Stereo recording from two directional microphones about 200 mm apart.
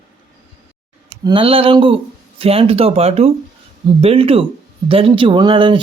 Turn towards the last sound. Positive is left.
turn(degrees=-25)  # may be behind; listen again after turning